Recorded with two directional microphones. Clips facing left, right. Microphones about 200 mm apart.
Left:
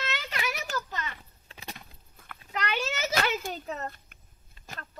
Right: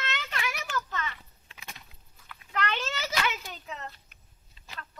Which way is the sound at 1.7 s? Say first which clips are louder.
Left 4 dB; 55° left (ahead or behind).